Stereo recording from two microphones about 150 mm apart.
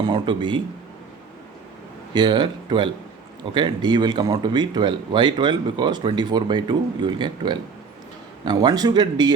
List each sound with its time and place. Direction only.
0.0 s speech: 30° right (ahead or behind)
2.1 s speech: 30° right (ahead or behind)